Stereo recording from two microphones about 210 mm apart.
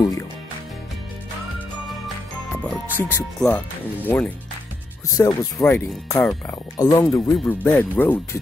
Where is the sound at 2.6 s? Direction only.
10° left (ahead or behind).